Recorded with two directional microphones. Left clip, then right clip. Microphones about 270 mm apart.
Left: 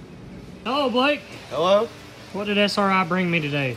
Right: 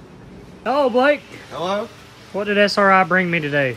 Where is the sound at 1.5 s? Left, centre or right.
Centre.